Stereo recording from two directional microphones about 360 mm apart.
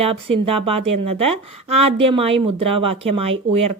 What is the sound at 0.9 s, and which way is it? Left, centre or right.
Speech, right.